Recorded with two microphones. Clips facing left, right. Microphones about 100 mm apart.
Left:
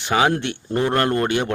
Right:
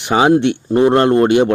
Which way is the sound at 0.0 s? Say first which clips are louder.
Right 7 dB; 20° right (ahead or behind).